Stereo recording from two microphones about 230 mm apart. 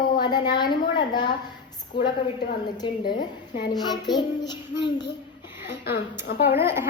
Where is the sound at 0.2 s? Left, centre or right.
Centre.